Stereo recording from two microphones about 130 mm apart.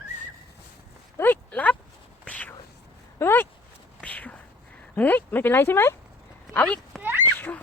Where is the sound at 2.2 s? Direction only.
10° left (ahead or behind).